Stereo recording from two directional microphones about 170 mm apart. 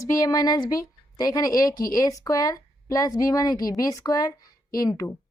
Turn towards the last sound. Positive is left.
turn(degrees=20)  # may be behind; listen again after turning